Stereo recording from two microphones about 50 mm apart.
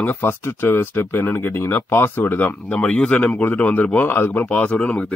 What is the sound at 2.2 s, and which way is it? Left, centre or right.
Speech, left.